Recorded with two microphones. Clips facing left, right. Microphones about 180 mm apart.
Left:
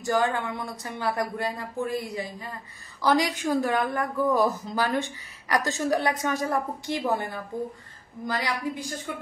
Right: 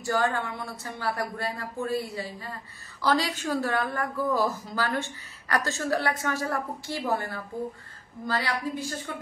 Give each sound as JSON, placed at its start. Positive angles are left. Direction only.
{"t": 0.0, "sound": "a woman's voice", "side_deg": 20}